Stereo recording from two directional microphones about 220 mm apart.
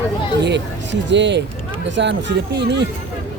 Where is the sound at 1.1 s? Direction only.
55° right (ahead or behind).